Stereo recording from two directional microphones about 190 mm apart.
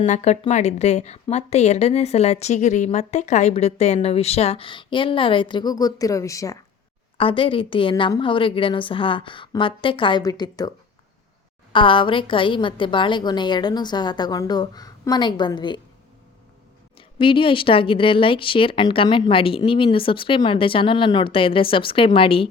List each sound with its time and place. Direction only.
0.0 s a woman's voice: 35° left (ahead or behind); by 6.6 s 15° left (ahead or behind)
7.2 s speech: 30° left (ahead or behind)
17.2 s speech: 25° left (ahead or behind)